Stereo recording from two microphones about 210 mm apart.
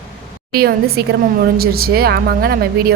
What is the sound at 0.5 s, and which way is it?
A woman's voice, 50° right (ahead or behind).